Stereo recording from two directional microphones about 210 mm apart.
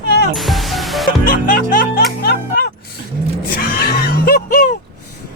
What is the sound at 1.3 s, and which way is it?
Music, 45° left (ahead or behind).